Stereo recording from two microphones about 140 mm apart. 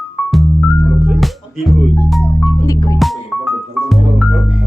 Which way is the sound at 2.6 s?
25° left (ahead or behind).